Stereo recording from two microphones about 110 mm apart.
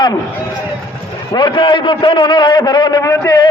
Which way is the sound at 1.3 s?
45° left (ahead or behind).